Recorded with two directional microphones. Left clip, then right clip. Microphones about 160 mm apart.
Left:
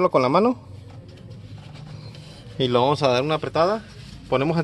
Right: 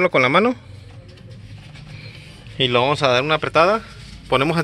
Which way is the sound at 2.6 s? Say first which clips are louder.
Right 2 dB; 10° left (ahead or behind).